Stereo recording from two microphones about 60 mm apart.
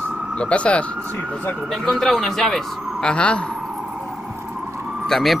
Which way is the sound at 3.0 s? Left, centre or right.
Centre.